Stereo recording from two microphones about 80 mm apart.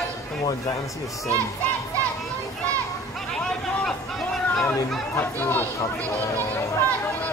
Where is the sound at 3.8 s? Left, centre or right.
Centre.